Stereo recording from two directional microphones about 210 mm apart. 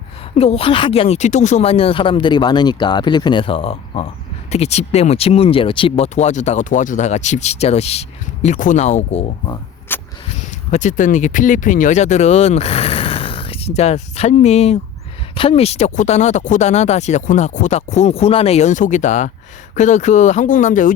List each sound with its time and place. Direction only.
0.3 s speech: 30° left (ahead or behind)
9.9 s a sound: 10° left (ahead or behind)
10.7 s speech: 35° left (ahead or behind)